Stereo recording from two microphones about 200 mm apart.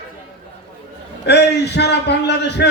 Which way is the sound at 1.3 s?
55° left (ahead or behind).